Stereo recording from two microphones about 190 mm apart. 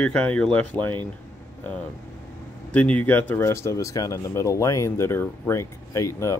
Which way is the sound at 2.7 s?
5° left (ahead or behind).